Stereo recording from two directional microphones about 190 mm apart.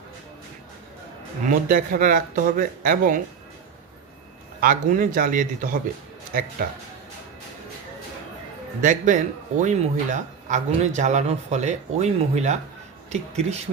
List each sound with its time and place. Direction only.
1.5 s speech: 45° right (ahead or behind)
4.6 s speech: 45° right (ahead or behind)
8.8 s a man's voice: 40° right (ahead or behind)